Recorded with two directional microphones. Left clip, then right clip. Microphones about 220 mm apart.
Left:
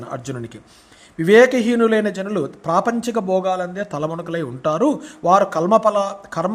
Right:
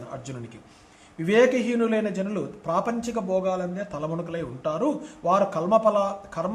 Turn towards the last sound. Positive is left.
turn(degrees=25)  # may be behind; listen again after turning